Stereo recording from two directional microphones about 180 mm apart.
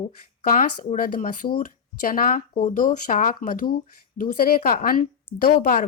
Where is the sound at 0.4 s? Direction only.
45° left (ahead or behind).